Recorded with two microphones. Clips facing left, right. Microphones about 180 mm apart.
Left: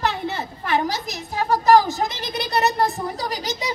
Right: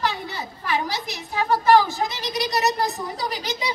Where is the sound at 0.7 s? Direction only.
45° left (ahead or behind).